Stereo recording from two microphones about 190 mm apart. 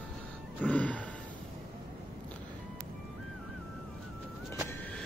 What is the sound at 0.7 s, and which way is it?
Gasp, 5° left (ahead or behind).